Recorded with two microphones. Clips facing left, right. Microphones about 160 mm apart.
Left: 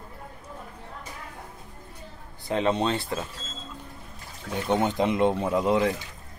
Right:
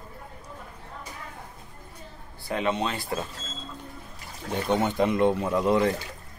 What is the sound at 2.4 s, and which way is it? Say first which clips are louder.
Speech: left 3 dB; 30° left (ahead or behind).